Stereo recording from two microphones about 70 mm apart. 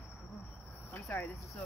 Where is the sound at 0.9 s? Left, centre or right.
Left.